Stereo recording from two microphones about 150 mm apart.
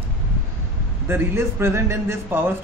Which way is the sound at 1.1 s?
15° right (ahead or behind).